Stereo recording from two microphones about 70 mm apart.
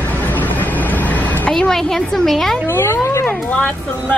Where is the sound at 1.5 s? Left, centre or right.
Centre.